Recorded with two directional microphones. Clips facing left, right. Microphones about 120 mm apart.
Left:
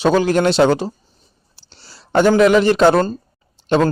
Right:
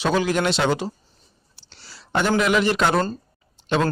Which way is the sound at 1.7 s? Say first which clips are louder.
Left 9 dB; 35° left (ahead or behind).